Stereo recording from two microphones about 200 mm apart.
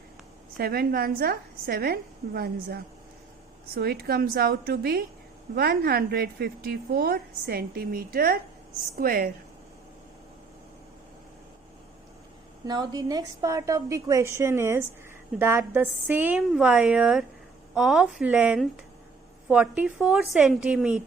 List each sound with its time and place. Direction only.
0.5 s a woman's voice: 50° right (ahead or behind)
12.6 s a woman's voice: 20° right (ahead or behind)